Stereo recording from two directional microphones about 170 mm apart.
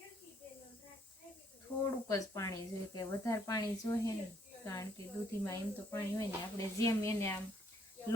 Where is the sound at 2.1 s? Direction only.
20° left (ahead or behind).